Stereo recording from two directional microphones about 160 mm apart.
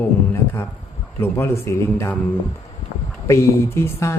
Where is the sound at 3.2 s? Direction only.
20° left (ahead or behind).